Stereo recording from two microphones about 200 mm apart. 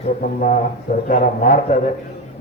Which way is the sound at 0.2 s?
45° left (ahead or behind).